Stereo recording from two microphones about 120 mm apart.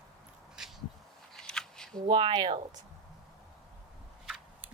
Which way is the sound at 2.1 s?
40° right (ahead or behind).